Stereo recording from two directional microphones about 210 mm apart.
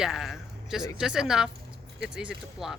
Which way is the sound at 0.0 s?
Centre (ahead or behind).